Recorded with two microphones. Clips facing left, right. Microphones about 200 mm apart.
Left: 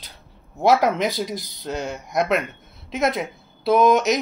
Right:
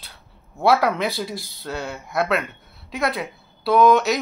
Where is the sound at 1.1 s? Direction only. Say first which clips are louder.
Left 2 dB; 20° left (ahead or behind).